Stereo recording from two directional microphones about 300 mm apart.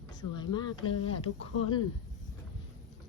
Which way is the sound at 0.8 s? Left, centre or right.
Left.